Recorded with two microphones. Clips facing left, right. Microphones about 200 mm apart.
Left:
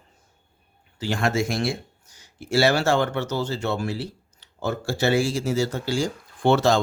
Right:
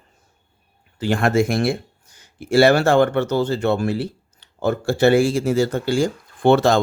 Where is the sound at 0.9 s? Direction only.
55° right (ahead or behind).